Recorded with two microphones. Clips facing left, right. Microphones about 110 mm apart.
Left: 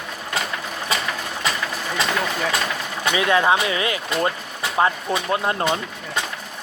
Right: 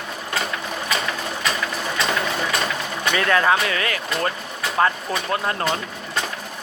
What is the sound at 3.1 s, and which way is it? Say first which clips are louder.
Speech: left 1 dB; 15° left (ahead or behind).